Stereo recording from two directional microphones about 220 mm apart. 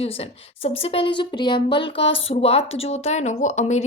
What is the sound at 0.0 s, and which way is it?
A woman's voice, 25° left (ahead or behind).